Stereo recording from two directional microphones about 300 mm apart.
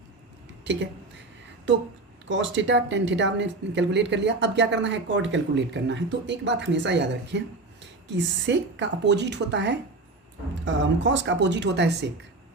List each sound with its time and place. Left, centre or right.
0.6 s speech: right
2.3 s speech: right